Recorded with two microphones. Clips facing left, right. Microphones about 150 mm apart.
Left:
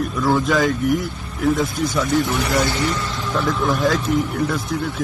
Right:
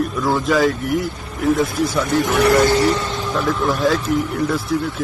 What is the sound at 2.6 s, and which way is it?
Speech, 45° right (ahead or behind).